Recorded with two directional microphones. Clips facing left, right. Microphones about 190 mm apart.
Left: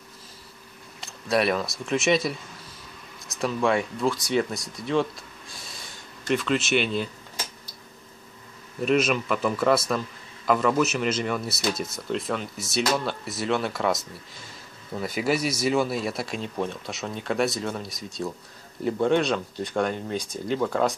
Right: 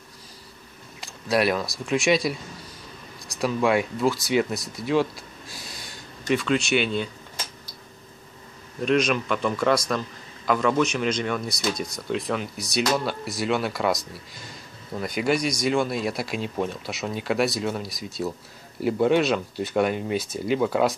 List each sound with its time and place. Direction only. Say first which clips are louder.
1.0 s a man's voice: right 1 dB; centre (ahead or behind)
5.5 s a sound: right 3 dB; centre (ahead or behind)
8.8 s a man's voice: even; 5° left (ahead or behind)